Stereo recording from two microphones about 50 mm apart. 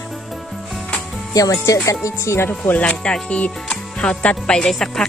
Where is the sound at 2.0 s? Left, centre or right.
Left.